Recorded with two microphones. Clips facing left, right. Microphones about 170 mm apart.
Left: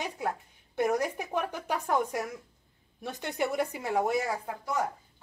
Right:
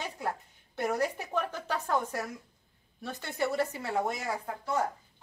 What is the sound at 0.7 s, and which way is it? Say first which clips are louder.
A woman's voice: left 2 dB; 15° left (ahead or behind).